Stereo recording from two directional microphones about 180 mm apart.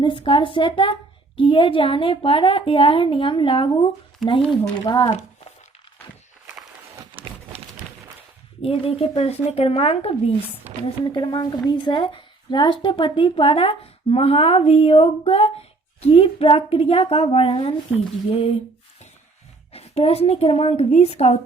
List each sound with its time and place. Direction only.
0.0 s a woman's voice: 30° left (ahead or behind)
4.2 s speech: centre (ahead or behind)
4.9 s a woman's voice: 25° left (ahead or behind)
7.0 s a sound: 30° right (ahead or behind)
8.6 s a woman's voice: 30° left (ahead or behind)
19.7 s a woman's voice: 35° left (ahead or behind)